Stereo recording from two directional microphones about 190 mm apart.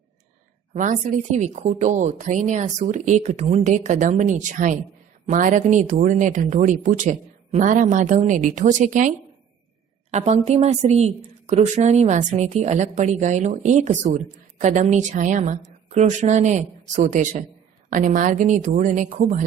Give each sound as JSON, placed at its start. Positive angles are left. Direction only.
{"t": 0.7, "sound": "a woman's voice", "side_deg": -40}